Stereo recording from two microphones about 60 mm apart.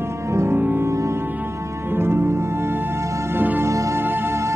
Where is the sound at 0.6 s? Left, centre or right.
Right.